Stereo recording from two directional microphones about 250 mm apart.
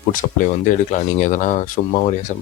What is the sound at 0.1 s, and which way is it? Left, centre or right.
Speech, left.